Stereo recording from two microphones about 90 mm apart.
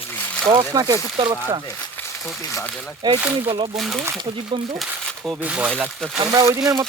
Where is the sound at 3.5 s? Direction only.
75° right (ahead or behind).